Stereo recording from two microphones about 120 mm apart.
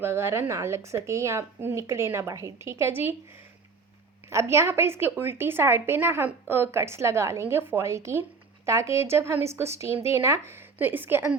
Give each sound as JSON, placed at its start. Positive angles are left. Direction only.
{"t": 0.0, "sound": "a woman's voice", "side_deg": -20}
{"t": 4.3, "sound": "a woman's voice", "side_deg": -25}